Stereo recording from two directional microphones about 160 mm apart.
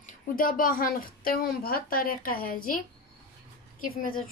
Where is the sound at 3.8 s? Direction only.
60° left (ahead or behind).